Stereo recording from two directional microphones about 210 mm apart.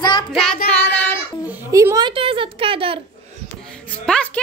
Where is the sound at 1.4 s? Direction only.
10° right (ahead or behind).